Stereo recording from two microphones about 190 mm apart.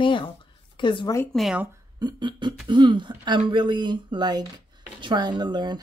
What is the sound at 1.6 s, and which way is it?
Speech, 20° right (ahead or behind).